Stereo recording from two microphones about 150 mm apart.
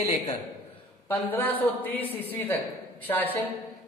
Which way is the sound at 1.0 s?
10° left (ahead or behind).